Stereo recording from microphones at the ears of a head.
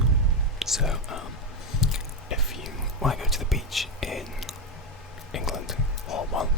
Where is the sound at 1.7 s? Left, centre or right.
Left.